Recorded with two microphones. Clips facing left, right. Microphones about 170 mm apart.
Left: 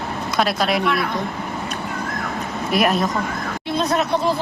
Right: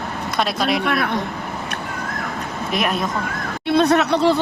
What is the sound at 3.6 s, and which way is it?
Speech, 65° right (ahead or behind).